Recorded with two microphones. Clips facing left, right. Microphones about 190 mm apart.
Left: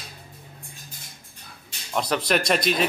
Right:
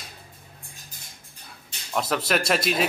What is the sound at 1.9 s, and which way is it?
Speech, 5° right (ahead or behind).